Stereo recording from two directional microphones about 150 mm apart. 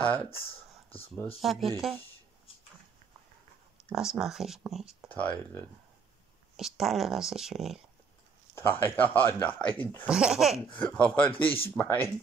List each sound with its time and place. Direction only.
0.0 s speech: 10° left (ahead or behind)
1.4 s speech: centre (ahead or behind)
3.9 s speech: 5° right (ahead or behind)
6.5 s speech: centre (ahead or behind)
8.5 s speech: 15° left (ahead or behind)
10.0 s speech: 5° right (ahead or behind)
10.8 s speech: 10° left (ahead or behind)
11.4 s speech: 40° left (ahead or behind)
11.7 s speech: 10° left (ahead or behind)